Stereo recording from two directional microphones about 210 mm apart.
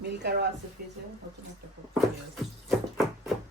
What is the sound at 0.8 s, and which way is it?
Speech, 45° right (ahead or behind).